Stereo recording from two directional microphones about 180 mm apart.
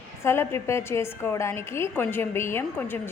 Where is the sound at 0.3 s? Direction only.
15° left (ahead or behind).